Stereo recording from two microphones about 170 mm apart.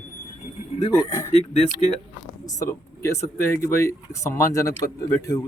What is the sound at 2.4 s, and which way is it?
Speech, 20° left (ahead or behind).